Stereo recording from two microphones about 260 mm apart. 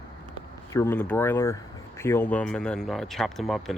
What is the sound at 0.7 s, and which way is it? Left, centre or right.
Speech, centre.